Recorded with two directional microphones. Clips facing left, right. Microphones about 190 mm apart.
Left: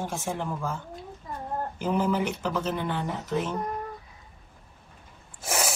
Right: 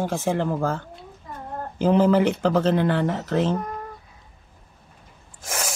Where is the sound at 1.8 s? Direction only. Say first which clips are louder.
Right 9 dB; 90° right.